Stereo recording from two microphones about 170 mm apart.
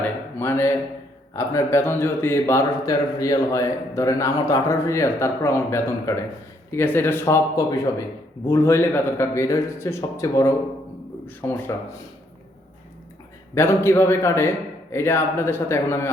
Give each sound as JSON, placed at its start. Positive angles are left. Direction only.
{"t": 0.0, "sound": "a sound", "side_deg": 15}
{"t": 1.4, "sound": "a man's voice", "side_deg": 15}
{"t": 13.5, "sound": "a man's voice", "side_deg": 15}